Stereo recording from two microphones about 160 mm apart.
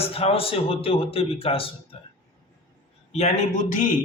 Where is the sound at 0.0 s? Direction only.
35° left (ahead or behind).